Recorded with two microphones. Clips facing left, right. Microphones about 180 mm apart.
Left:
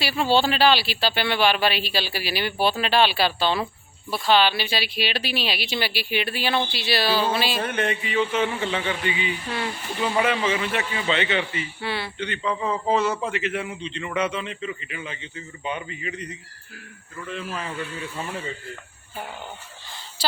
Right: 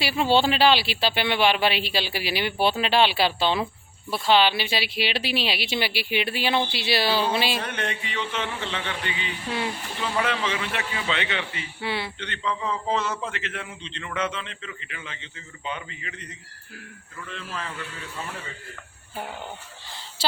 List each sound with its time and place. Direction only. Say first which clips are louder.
0.0 s speech: even; 20° right (ahead or behind)
7.6 s a man's voice: left 5 dB; 5° left (ahead or behind)
11.8 s speech: right 2 dB; 20° right (ahead or behind)
12.2 s a man's voice: left 3 dB; 10° left (ahead or behind)